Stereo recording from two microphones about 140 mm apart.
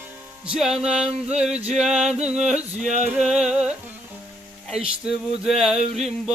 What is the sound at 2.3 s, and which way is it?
Music, 55° right (ahead or behind).